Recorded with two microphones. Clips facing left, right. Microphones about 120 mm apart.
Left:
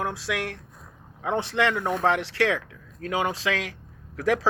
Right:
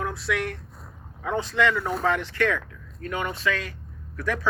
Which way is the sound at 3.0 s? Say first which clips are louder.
Left 2 dB; 90° left.